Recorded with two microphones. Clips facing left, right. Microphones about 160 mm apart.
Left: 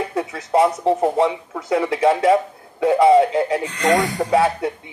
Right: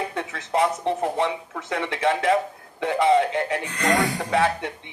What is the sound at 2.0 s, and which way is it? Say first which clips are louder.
Speech: left 4 dB; 30° left (ahead or behind).